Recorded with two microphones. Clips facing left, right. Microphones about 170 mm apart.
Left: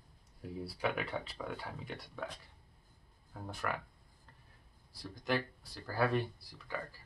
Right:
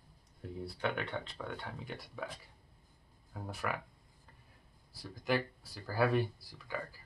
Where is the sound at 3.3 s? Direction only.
5° right (ahead or behind).